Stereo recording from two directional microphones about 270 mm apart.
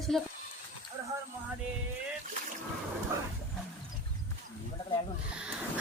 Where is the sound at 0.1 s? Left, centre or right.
Centre.